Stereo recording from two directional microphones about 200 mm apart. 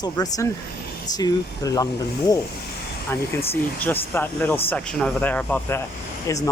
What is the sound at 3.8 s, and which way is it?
Speech, 10° left (ahead or behind).